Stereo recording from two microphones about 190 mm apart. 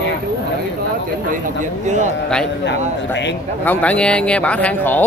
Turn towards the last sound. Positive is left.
turn(degrees=10)  # may be behind; listen again after turning